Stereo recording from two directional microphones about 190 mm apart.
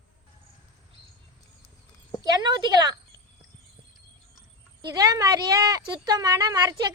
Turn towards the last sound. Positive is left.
turn(degrees=-20)  # may be behind; listen again after turning